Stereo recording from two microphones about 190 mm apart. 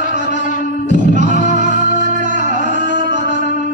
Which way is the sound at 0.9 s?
40° right (ahead or behind).